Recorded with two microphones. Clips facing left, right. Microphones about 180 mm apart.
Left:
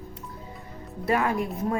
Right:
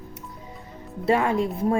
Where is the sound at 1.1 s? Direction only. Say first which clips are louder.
Right 3 dB; 25° right (ahead or behind).